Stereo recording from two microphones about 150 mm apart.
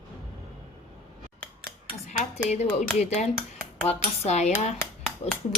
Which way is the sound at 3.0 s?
45° left (ahead or behind).